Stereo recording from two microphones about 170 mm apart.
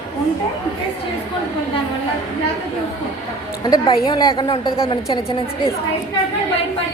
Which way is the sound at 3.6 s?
25° left (ahead or behind).